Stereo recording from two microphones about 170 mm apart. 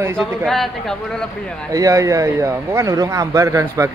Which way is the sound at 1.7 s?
20° right (ahead or behind).